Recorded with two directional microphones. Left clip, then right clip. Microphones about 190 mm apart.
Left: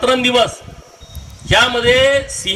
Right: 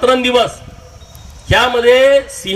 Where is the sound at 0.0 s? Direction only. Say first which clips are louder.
Right 2 dB; 55° right (ahead or behind).